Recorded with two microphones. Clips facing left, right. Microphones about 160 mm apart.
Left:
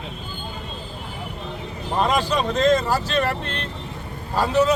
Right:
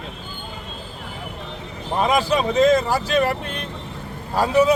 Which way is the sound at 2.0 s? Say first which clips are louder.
Right 2 dB; 10° right (ahead or behind).